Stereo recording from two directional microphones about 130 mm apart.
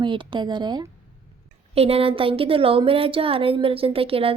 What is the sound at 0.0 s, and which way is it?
Speech, 40° right (ahead or behind).